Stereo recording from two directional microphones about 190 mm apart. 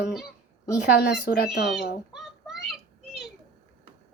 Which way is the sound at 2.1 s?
Centre (ahead or behind).